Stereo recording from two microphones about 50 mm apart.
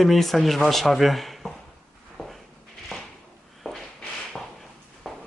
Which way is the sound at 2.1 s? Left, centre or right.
Centre.